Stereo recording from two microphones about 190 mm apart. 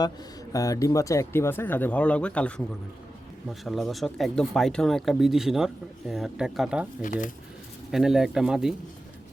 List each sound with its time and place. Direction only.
0.5 s speech: 20° left (ahead or behind)
3.5 s speech: centre (ahead or behind)
7.0 s speech: 45° left (ahead or behind)
7.9 s speech: centre (ahead or behind)